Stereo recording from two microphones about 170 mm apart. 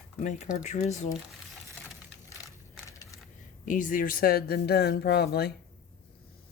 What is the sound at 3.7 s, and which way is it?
Speech, 50° left (ahead or behind).